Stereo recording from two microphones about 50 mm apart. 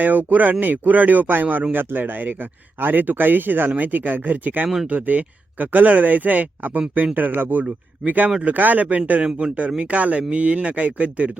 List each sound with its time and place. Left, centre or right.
0.0 s speech: right